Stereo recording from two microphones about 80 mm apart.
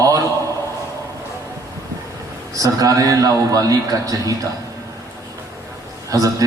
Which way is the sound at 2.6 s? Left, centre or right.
Right.